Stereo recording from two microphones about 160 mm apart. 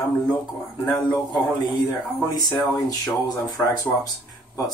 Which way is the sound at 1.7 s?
Centre (ahead or behind).